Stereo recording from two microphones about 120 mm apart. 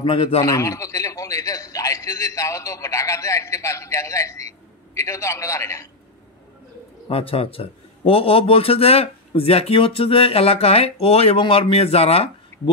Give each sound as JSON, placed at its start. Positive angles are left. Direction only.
{"t": 0.0, "sound": "a man's voice", "side_deg": 50}
{"t": 0.4, "sound": "a man's voice", "side_deg": 25}
{"t": 7.1, "sound": "a man's voice", "side_deg": 55}